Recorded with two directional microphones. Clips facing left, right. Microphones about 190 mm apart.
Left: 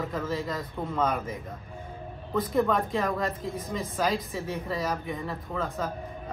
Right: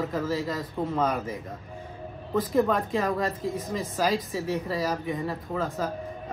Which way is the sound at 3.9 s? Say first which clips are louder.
Right 2 dB; centre (ahead or behind).